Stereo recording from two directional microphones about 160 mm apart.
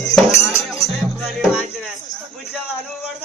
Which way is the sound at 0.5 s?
20° left (ahead or behind).